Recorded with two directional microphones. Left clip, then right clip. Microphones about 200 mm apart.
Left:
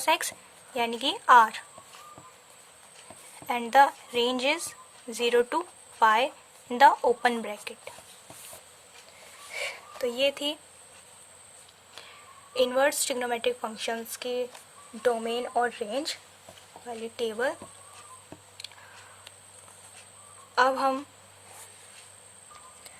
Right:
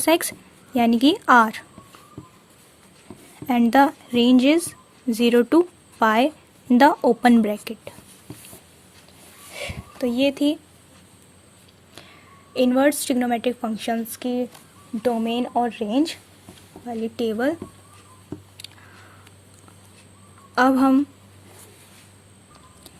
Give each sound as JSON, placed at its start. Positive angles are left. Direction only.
{"t": 0.0, "sound": "a woman's voice", "side_deg": -30}
{"t": 3.4, "sound": "a woman's voice", "side_deg": -25}
{"t": 9.5, "sound": "a sound", "side_deg": -20}
{"t": 12.5, "sound": "a woman's voice", "side_deg": -20}
{"t": 18.6, "sound": "a sound", "side_deg": -25}
{"t": 20.6, "sound": "speech", "side_deg": -30}